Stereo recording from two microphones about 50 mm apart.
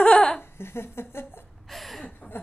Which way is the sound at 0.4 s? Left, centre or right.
Left.